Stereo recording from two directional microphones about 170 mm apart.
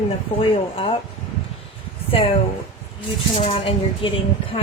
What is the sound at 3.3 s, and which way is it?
Speech, 35° left (ahead or behind).